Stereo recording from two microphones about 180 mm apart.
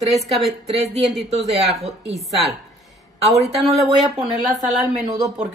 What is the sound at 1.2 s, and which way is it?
A woman's voice, 35° right (ahead or behind).